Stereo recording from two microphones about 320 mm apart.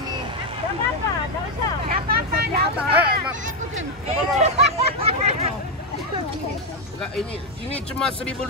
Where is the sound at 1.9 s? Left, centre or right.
Right.